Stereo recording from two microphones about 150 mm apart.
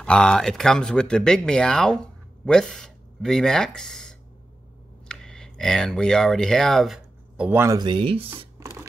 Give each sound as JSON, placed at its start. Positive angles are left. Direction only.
{"t": 0.0, "sound": "speech", "side_deg": 5}
{"t": 7.3, "sound": "speech", "side_deg": -15}
{"t": 7.8, "sound": "speech", "side_deg": -35}